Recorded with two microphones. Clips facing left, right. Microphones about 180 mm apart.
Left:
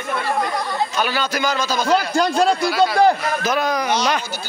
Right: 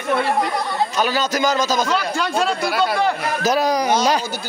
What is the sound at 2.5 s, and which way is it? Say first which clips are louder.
Speech: left 2 dB; 55° right (ahead or behind).